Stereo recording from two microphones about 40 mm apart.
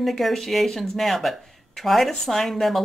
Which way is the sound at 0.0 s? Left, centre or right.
Centre.